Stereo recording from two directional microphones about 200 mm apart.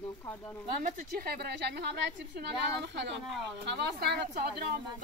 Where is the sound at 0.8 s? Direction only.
45° right (ahead or behind).